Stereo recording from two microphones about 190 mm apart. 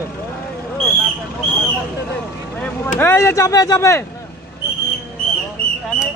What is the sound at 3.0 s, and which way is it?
Speech, 15° left (ahead or behind).